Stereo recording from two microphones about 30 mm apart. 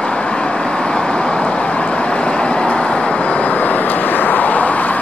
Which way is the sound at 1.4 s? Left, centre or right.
Left.